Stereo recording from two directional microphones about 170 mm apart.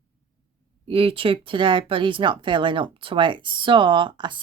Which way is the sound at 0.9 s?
30° right (ahead or behind).